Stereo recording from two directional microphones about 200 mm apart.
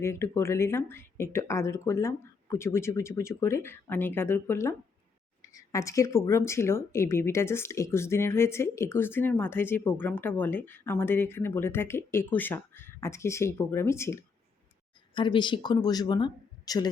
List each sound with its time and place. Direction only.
0.0 s speech: 15° left (ahead or behind)